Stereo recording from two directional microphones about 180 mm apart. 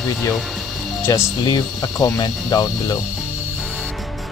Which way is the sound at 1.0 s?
15° left (ahead or behind).